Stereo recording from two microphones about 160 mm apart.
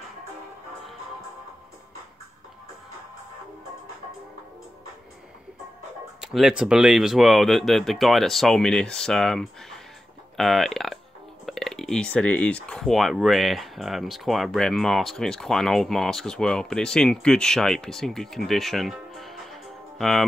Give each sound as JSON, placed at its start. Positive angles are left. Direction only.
{"t": 6.2, "sound": "speech", "side_deg": -5}